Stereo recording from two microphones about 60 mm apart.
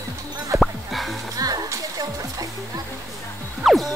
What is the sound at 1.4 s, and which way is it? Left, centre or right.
Music, right.